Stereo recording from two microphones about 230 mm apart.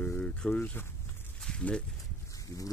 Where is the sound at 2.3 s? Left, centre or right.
Centre.